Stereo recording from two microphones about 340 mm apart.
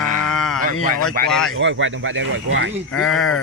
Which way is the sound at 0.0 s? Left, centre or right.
Right.